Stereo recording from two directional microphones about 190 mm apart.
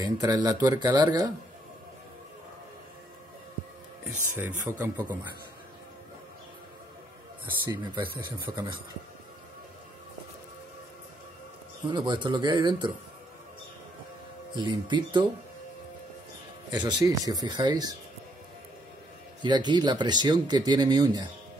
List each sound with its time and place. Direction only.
0.0 s speech: 20° right (ahead or behind)
4.4 s speech: 10° right (ahead or behind)
7.7 s speech: 25° right (ahead or behind)
11.9 s speech: 25° right (ahead or behind)
14.5 s speech: 25° right (ahead or behind)
16.7 s speech: 20° right (ahead or behind)
19.4 s speech: 25° right (ahead or behind)